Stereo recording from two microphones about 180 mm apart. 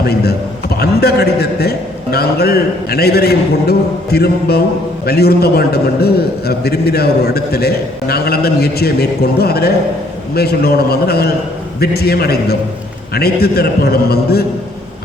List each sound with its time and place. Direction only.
0.0 s a man's voice: 60° left (ahead or behind)